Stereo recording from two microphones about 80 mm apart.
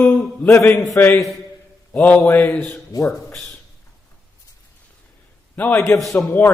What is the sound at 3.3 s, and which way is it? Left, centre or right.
Speech, centre.